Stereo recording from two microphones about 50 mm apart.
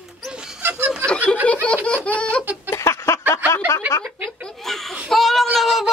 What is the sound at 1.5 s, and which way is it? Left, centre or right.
Laughter, left.